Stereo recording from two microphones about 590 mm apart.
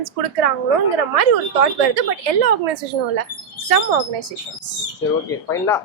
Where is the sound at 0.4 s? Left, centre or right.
Right.